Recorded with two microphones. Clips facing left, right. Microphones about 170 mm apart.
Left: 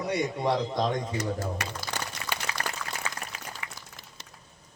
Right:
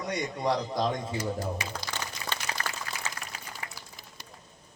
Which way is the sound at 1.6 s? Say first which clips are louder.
Left 2 dB; 65° left (ahead or behind).